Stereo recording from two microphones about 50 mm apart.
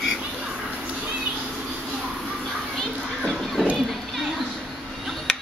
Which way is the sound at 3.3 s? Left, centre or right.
Centre.